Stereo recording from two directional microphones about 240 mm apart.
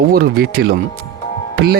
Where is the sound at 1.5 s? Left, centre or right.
Right.